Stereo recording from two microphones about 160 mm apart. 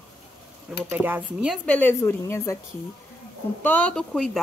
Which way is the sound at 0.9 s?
10° right (ahead or behind).